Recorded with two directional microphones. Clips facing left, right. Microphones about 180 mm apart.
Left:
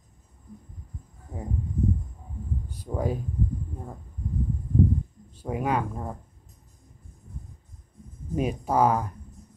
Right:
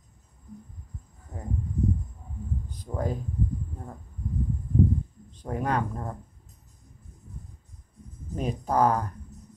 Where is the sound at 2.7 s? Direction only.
10° left (ahead or behind).